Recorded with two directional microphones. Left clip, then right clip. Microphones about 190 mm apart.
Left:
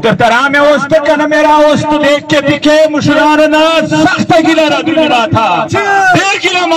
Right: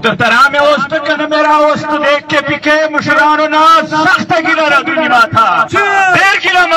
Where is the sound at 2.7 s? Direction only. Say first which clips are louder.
Left 1 dB; 30° left (ahead or behind).